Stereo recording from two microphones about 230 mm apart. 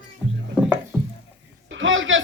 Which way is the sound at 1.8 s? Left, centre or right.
Right.